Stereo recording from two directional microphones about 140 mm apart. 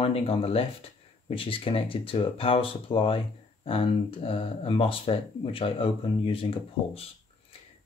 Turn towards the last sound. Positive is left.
turn(degrees=40)  # may be behind; listen again after turning